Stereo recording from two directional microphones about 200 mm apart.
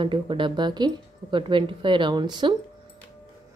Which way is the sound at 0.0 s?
25° right (ahead or behind).